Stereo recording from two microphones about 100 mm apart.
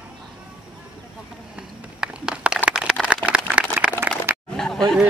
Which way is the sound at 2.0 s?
10° right (ahead or behind).